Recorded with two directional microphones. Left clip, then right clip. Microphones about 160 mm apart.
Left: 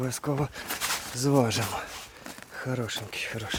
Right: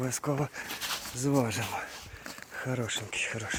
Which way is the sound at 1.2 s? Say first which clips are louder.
Left 5 dB; 20° left (ahead or behind).